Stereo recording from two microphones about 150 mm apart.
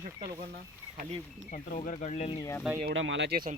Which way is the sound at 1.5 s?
60° left (ahead or behind).